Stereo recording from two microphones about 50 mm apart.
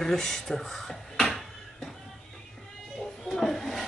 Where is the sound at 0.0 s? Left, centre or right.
Centre.